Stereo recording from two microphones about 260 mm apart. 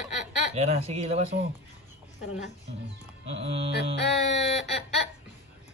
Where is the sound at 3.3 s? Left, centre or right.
Right.